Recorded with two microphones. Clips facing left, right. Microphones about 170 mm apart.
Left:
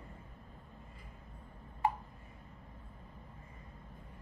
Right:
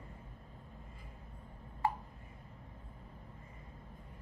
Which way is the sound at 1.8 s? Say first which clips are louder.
Left 2 dB; 15° left (ahead or behind).